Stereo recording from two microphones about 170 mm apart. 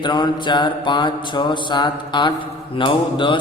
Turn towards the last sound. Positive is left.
turn(degrees=30)  # may be behind; listen again after turning